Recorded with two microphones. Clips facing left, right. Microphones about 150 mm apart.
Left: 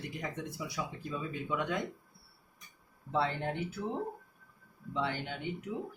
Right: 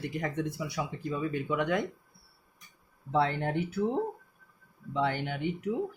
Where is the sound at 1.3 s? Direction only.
65° right (ahead or behind).